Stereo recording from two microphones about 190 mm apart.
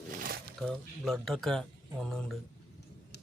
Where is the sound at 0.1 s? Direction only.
50° right (ahead or behind).